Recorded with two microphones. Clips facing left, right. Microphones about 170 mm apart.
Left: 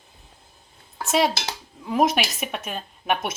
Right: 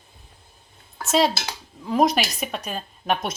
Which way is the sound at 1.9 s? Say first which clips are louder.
Right 1 dB; 5° left (ahead or behind).